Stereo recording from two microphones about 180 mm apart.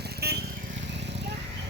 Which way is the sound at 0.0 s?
60° right (ahead or behind).